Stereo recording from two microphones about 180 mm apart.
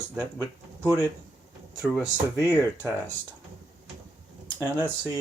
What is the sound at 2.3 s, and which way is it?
Speech, 15° left (ahead or behind).